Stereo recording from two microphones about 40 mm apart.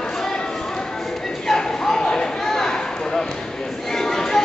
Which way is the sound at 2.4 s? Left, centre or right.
Centre.